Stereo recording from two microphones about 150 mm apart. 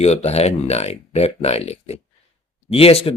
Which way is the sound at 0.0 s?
45° left (ahead or behind).